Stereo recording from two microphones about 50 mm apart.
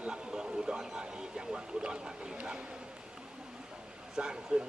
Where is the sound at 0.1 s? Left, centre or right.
Centre.